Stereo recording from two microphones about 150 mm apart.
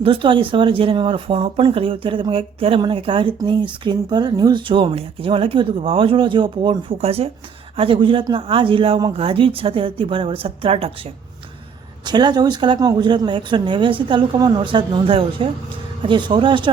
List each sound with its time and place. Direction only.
0.0 s speech: 35° right (ahead or behind)
12.0 s speech: 30° right (ahead or behind)